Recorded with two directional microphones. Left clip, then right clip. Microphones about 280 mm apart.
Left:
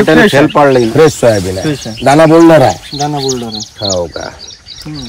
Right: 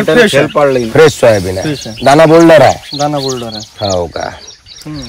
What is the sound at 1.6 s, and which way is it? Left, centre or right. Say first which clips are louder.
Speech: left 1 dB; centre.